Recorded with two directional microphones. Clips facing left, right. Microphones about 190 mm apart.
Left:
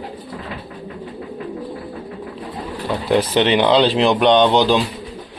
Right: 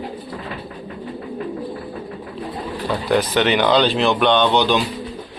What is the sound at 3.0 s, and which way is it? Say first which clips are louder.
Speech: left 2 dB; 25° left (ahead or behind).